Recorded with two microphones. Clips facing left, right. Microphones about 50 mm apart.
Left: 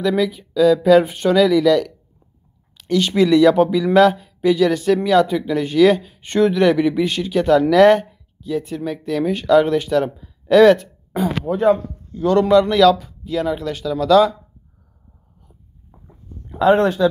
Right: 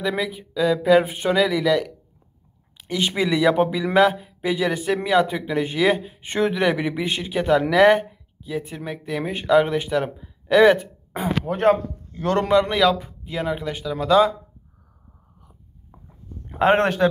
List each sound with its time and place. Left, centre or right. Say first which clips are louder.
0.1 s speech: left 7 dB; centre
11.4 s a man's voice: left 2 dB; right
12.4 s speech: left 5 dB; right
16.4 s speech: left 3 dB; right